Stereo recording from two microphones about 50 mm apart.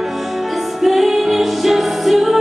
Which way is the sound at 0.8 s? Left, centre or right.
Centre.